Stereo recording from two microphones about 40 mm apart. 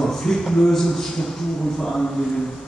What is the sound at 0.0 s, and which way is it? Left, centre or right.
Speech, centre.